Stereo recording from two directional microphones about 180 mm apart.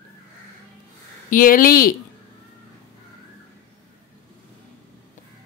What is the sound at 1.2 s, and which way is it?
Speech, 50° left (ahead or behind).